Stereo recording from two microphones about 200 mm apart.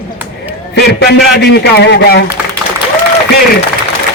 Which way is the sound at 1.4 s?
55° left (ahead or behind).